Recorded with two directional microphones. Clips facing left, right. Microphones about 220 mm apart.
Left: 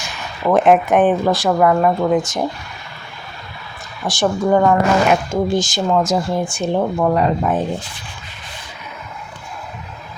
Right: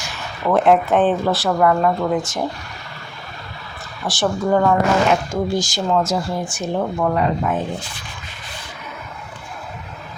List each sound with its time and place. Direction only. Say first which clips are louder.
0.4 s speech: left 2 dB; 15° left (ahead or behind)
4.0 s speech: left 3 dB; 15° left (ahead or behind); by 7.5 s 30° left (ahead or behind)